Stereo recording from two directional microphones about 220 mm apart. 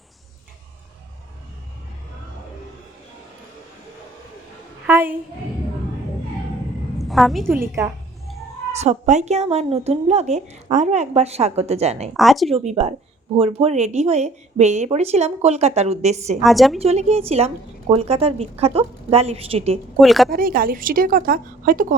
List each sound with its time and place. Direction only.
4.9 s a sound: 10° right (ahead or behind)
7.0 s a sound: centre (ahead or behind)
7.8 s a woman's voice: 10° right (ahead or behind)
8.7 s speech: 30° right (ahead or behind)
12.1 s speech: centre (ahead or behind)
12.5 s speech: 25° right (ahead or behind)
16.4 s speech: centre (ahead or behind)
16.8 s speech: 30° right (ahead or behind)
20.0 s speech: centre (ahead or behind)
20.3 s a woman's voice: 40° right (ahead or behind)